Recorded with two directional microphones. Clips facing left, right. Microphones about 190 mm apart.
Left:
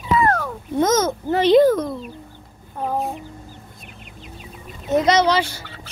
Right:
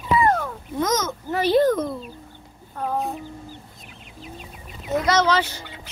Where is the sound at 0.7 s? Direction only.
25° left (ahead or behind).